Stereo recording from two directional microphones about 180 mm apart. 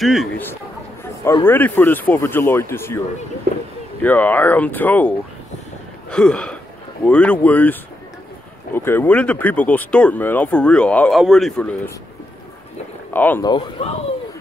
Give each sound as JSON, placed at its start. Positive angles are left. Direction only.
{"t": 0.0, "sound": "gasp", "side_deg": 0}
{"t": 1.2, "sound": "speech", "side_deg": 15}
{"t": 3.5, "sound": "speech", "side_deg": -65}
{"t": 4.0, "sound": "speech", "side_deg": 10}
{"t": 6.0, "sound": "gasp", "side_deg": 5}
{"t": 7.1, "sound": "speech", "side_deg": 5}
{"t": 8.7, "sound": "speech", "side_deg": 10}
{"t": 13.1, "sound": "speech", "side_deg": 10}
{"t": 13.4, "sound": "speech", "side_deg": 25}